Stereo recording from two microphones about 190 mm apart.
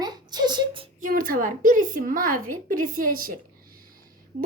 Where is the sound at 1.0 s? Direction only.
50° right (ahead or behind).